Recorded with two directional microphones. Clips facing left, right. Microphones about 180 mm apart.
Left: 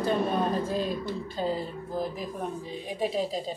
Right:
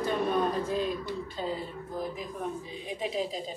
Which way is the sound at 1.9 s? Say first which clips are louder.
Left 3 dB; 30° left (ahead or behind).